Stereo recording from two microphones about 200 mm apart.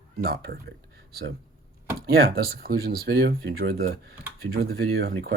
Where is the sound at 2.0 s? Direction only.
50° right (ahead or behind).